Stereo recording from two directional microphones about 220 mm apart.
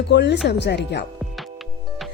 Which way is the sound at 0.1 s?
50° left (ahead or behind).